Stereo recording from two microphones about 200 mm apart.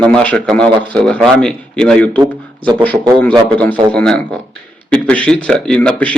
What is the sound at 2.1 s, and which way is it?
Speech, 25° right (ahead or behind).